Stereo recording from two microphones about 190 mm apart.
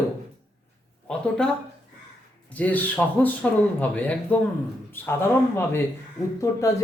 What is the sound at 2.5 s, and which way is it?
Speech, 10° left (ahead or behind).